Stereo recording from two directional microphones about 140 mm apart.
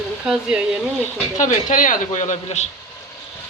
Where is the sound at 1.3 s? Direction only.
65° left (ahead or behind).